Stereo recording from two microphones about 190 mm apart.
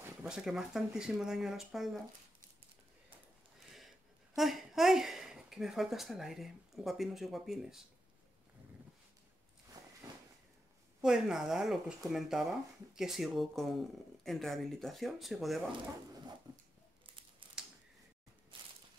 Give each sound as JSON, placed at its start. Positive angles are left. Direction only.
{"t": 0.0, "sound": "speech", "side_deg": -5}
{"t": 4.4, "sound": "speech", "side_deg": 0}
{"t": 11.0, "sound": "speech", "side_deg": -5}
{"t": 17.0, "sound": "crumpling", "side_deg": -25}
{"t": 18.5, "sound": "walk", "side_deg": -25}